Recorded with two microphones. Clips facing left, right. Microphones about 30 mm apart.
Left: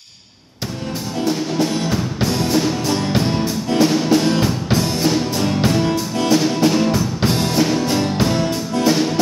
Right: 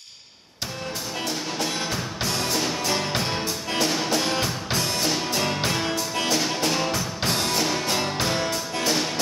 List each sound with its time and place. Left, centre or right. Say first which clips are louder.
1.2 s music: left 10 dB; centre
5.2 s music: left 6 dB; centre
6.2 s music: left 10 dB; centre